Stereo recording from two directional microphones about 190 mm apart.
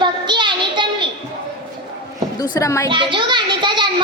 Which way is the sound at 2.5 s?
15° left (ahead or behind).